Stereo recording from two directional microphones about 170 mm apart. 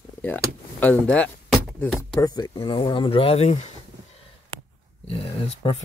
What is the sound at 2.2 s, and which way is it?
Speech, 20° left (ahead or behind).